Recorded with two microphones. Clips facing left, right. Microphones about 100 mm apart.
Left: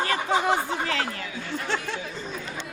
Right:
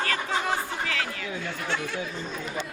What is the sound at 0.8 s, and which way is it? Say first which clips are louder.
Speech: left 3 dB; 35° left (ahead or behind).